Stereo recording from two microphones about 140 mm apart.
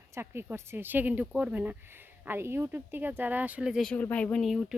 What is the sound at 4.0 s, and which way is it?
Speech, 10° left (ahead or behind).